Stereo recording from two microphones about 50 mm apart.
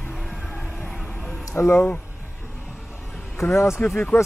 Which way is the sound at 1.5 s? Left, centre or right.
Left.